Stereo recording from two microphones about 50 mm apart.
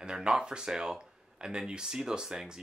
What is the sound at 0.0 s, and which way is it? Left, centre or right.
Speech, centre.